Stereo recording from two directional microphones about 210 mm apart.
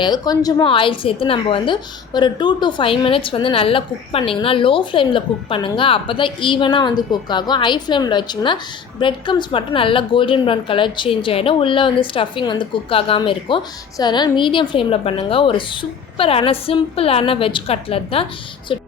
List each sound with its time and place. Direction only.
0.0 s a woman's voice: 20° left (ahead or behind)
18.7 s music: 25° left (ahead or behind)